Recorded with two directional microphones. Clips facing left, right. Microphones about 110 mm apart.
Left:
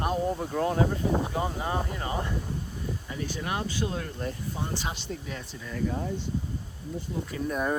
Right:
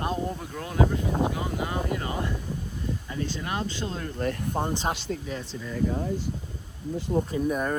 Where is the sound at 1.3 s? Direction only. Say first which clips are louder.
Left 1 dB; 35° left (ahead or behind); by 4.0 s 15° left (ahead or behind).